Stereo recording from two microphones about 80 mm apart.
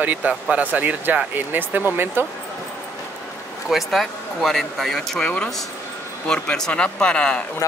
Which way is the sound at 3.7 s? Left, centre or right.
Centre.